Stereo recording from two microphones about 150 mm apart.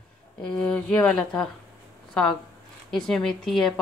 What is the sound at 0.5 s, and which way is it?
A woman's voice, 5° left (ahead or behind).